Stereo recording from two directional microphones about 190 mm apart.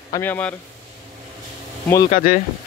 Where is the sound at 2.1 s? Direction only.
45° left (ahead or behind).